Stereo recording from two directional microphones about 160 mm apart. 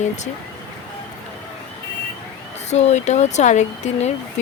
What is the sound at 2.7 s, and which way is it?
Speech, 45° left (ahead or behind).